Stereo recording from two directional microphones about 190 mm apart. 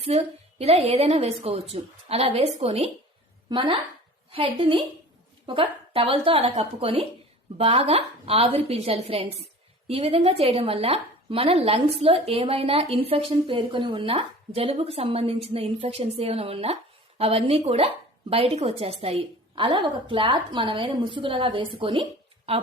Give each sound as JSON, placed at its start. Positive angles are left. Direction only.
{"t": 0.0, "sound": "a woman's voice", "side_deg": -30}